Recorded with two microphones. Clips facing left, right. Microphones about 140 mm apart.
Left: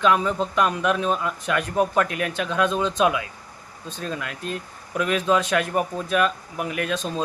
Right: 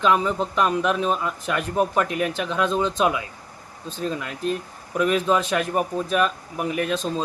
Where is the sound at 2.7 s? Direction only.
30° right (ahead or behind).